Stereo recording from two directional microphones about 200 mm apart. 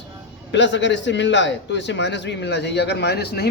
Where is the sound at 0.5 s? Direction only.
65° left (ahead or behind).